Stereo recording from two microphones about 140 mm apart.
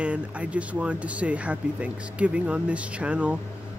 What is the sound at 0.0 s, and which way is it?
Speech, 10° right (ahead or behind).